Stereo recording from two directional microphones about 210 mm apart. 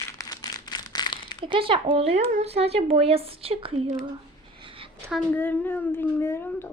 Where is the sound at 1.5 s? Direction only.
25° right (ahead or behind).